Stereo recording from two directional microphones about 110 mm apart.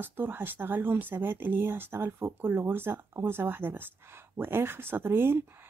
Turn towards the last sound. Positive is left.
turn(degrees=-20)  # may be behind; listen again after turning